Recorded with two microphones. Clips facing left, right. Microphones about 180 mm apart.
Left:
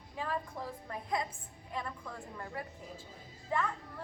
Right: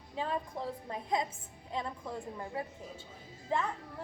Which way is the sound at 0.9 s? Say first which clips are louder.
Right 2 dB; 25° right (ahead or behind).